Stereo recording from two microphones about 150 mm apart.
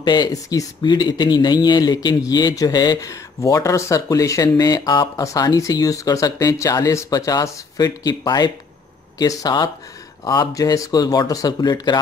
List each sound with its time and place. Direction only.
0.0 s speech: 30° left (ahead or behind)